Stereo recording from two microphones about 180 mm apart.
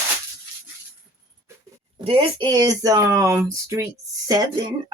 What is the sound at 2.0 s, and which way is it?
Speech, 30° right (ahead or behind).